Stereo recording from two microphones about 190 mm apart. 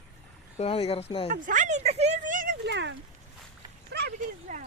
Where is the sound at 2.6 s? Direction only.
70° right (ahead or behind).